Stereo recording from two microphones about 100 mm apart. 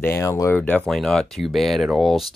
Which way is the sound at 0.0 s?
25° left (ahead or behind).